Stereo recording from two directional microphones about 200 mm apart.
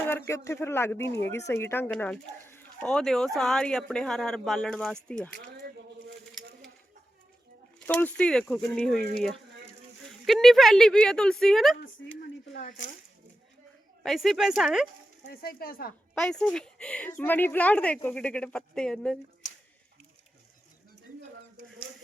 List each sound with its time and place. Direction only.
0.0 s speech: 10° left (ahead or behind)
7.8 s speech: 5° left (ahead or behind)
10.1 s speech: centre (ahead or behind)
12.5 s speech: 40° left (ahead or behind)
14.0 s speech: centre (ahead or behind)
15.3 s speech: 50° left (ahead or behind)
16.1 s speech: 5° left (ahead or behind)